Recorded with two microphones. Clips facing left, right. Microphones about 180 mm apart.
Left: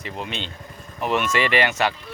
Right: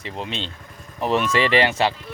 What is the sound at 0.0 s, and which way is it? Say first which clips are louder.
Speech: right 1 dB; 30° right (ahead or behind).